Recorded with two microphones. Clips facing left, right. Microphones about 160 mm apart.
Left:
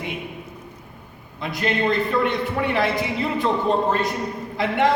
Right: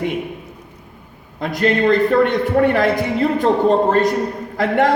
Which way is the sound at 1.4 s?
50° right (ahead or behind).